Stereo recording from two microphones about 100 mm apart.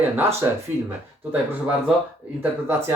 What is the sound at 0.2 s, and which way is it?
Speech, 25° right (ahead or behind).